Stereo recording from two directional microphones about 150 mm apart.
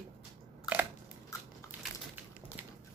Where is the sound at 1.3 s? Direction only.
20° left (ahead or behind).